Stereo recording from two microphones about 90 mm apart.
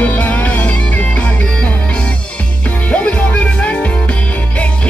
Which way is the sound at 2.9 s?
15° left (ahead or behind).